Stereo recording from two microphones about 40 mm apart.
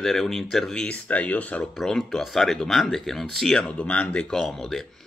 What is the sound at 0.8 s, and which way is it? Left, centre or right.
Speech, left.